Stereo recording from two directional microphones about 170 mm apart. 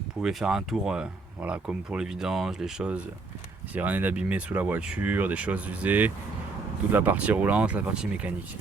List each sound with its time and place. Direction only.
0.2 s speech: 5° right (ahead or behind)